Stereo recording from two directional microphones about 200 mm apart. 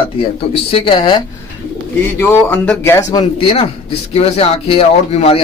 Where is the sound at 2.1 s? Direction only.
10° left (ahead or behind).